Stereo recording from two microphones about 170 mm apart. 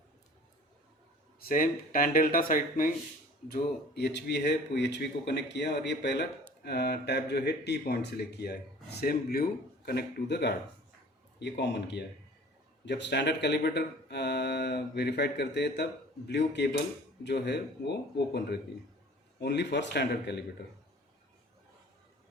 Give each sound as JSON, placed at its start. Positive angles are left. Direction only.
{"t": 1.4, "sound": "speech", "side_deg": 55}
{"t": 3.5, "sound": "speech", "side_deg": 75}
{"t": 6.6, "sound": "speech", "side_deg": 70}
{"t": 19.4, "sound": "speech", "side_deg": 90}